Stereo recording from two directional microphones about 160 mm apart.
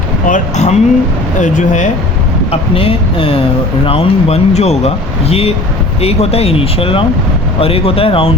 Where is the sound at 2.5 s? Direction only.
35° left (ahead or behind).